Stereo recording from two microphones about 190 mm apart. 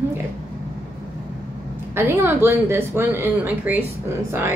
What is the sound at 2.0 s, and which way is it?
A woman's voice, 10° right (ahead or behind).